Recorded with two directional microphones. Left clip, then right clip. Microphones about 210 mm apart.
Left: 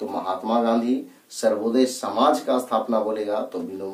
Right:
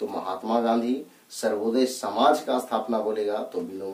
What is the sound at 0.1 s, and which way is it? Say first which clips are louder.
Speech: left 6 dB; 15° right (ahead or behind).